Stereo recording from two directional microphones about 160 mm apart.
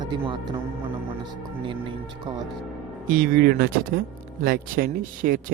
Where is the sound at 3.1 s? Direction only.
65° right (ahead or behind).